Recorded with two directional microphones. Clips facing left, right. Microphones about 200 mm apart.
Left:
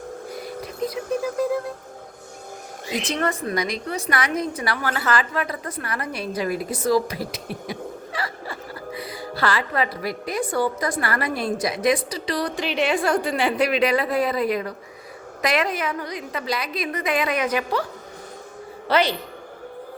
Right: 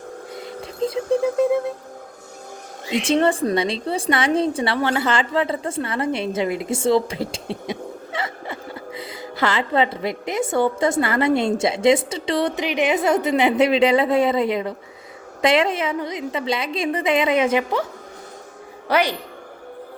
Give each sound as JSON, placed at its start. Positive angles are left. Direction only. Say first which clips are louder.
{"t": 0.3, "sound": "a sound", "louder": "even", "side_deg": -25}
{"t": 2.9, "sound": "a woman's voice", "louder": "right 7 dB", "side_deg": -30}
{"t": 18.9, "sound": "a woman's voice", "louder": "right 1 dB", "side_deg": -10}